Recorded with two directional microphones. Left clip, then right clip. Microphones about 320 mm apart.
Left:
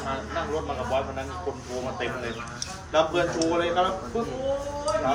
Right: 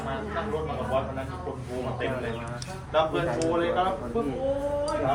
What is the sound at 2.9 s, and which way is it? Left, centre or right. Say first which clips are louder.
Speech: left 2 dB; left.